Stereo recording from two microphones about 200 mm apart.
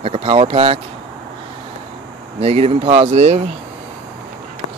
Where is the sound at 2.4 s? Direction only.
30° right (ahead or behind).